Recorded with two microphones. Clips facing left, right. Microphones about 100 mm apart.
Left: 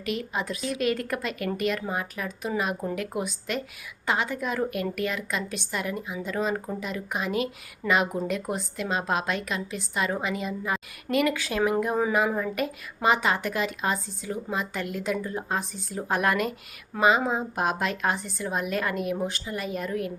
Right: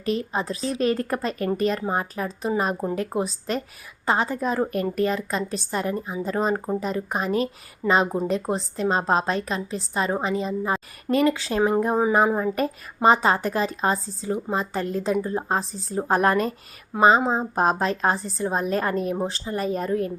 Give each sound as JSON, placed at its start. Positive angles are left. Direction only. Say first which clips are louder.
{"t": 0.0, "sound": "a woman's voice", "louder": "right 4 dB", "side_deg": -35}